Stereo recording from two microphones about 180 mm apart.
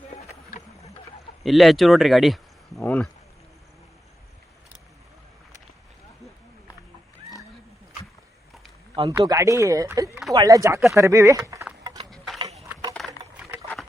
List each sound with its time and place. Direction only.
0.1 s boat: 35° left (ahead or behind)
1.5 s speech: centre (ahead or behind)
9.0 s speech: 25° right (ahead or behind)
10.9 s a sound: 15° right (ahead or behind)
12.1 s a sound: centre (ahead or behind)
13.0 s rowboat: centre (ahead or behind)